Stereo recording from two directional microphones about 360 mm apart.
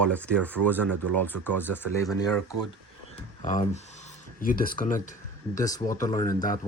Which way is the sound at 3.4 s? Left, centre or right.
Left.